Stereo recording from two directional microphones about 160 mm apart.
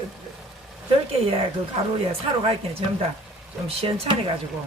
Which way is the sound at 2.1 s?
40° right (ahead or behind).